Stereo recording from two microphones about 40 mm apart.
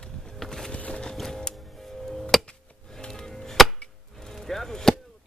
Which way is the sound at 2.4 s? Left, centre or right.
Left.